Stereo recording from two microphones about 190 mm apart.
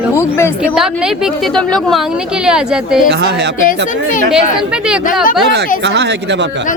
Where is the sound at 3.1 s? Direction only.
65° right (ahead or behind).